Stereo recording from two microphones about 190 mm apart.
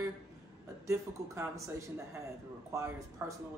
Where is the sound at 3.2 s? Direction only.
10° right (ahead or behind).